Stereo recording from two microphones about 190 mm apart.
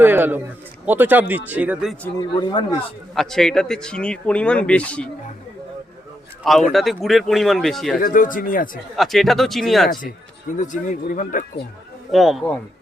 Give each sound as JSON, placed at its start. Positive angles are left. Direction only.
{"t": 0.0, "sound": "a man's voice", "side_deg": -10}
{"t": 2.4, "sound": "speech", "side_deg": 25}
{"t": 3.2, "sound": "speech", "side_deg": 5}
{"t": 6.7, "sound": "speech", "side_deg": 0}
{"t": 8.0, "sound": "speech", "side_deg": 45}
{"t": 9.0, "sound": "speech", "side_deg": 0}
{"t": 10.6, "sound": "speech", "side_deg": 40}
{"t": 12.1, "sound": "speech", "side_deg": 0}